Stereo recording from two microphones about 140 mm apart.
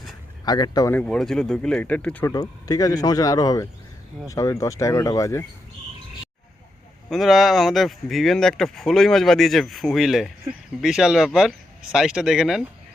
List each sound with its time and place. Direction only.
0.4 s speech: 30° left (ahead or behind)
0.9 s speech: 10° left (ahead or behind)
2.2 s speech: 25° left (ahead or behind)
7.1 s speech: centre (ahead or behind)